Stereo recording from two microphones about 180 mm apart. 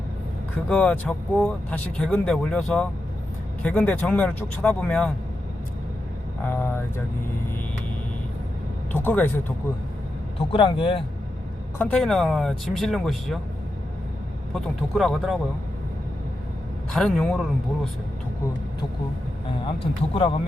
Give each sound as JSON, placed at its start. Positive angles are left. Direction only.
{"t": 0.7, "sound": "speech", "side_deg": 5}
{"t": 6.4, "sound": "speech", "side_deg": 10}
{"t": 9.0, "sound": "speech", "side_deg": 10}
{"t": 10.5, "sound": "speech", "side_deg": 30}
{"t": 11.8, "sound": "speech", "side_deg": 5}
{"t": 14.5, "sound": "speech", "side_deg": 0}
{"t": 16.9, "sound": "speech", "side_deg": 0}
{"t": 19.6, "sound": "speech", "side_deg": 30}